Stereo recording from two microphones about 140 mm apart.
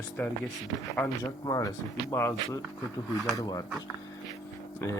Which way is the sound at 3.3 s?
25° left (ahead or behind).